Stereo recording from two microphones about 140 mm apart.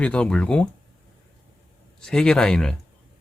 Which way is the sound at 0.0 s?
10° left (ahead or behind).